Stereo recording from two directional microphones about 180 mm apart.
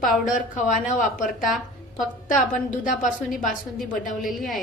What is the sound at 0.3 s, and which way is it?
Speech, 45° left (ahead or behind).